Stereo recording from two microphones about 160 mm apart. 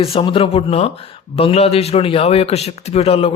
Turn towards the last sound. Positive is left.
turn(degrees=35)  # may be behind; listen again after turning